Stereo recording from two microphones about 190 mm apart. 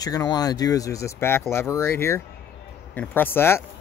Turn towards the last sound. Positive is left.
turn(degrees=10)  # may be behind; listen again after turning